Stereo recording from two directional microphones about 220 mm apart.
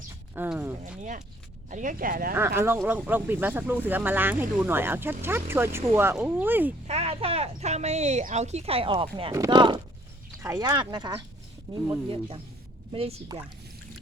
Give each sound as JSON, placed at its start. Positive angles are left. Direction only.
{"t": 0.3, "sound": "speech", "side_deg": -10}
{"t": 1.7, "sound": "speech", "side_deg": -35}
{"t": 2.6, "sound": "speech", "side_deg": -10}
{"t": 6.8, "sound": "speech", "side_deg": -30}